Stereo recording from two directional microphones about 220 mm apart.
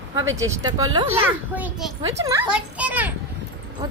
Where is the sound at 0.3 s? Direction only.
15° right (ahead or behind).